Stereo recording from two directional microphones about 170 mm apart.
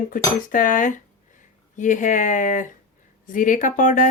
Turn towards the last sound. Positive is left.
turn(degrees=45)  # may be behind; listen again after turning